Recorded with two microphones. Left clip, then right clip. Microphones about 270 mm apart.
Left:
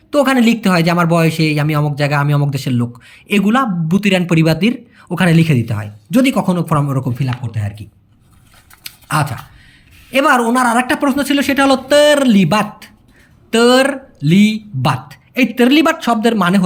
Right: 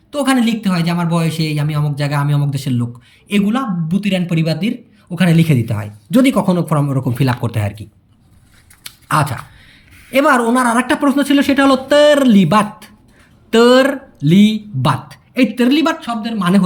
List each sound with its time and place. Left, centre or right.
0.1 s speech: centre
7.1 s speech: centre
8.8 s a sound: centre
10.1 s speech: centre